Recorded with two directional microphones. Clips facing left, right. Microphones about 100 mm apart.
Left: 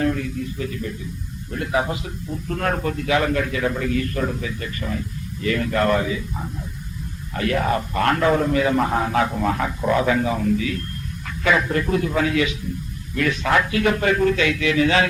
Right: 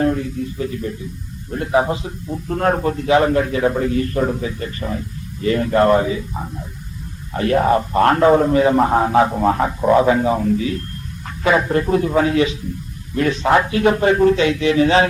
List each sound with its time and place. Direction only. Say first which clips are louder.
0.0 s a man's voice: right 4 dB; 30° right (ahead or behind)